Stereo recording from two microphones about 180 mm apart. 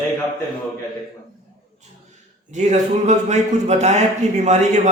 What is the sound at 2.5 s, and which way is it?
Speech, 40° right (ahead or behind).